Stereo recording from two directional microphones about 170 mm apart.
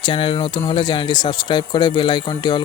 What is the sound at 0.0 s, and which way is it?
Speech, 30° left (ahead or behind).